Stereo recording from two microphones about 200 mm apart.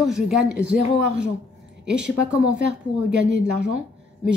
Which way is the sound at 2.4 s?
65° right (ahead or behind).